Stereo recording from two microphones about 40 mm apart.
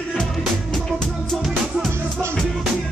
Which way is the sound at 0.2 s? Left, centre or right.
Centre.